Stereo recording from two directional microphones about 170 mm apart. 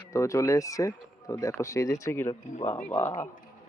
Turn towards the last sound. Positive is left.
turn(degrees=15)  # may be behind; listen again after turning